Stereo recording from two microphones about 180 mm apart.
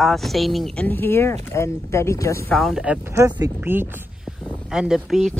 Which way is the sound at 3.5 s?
10° right (ahead or behind).